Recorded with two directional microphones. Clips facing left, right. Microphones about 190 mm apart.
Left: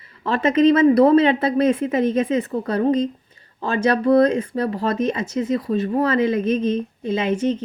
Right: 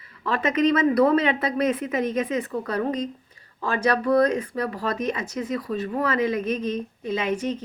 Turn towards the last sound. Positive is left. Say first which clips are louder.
# left 5 dB
turn(degrees=25)  # may be behind; listen again after turning